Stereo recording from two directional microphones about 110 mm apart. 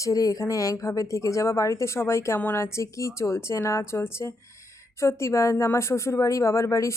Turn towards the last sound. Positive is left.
turn(degrees=25)  # may be behind; listen again after turning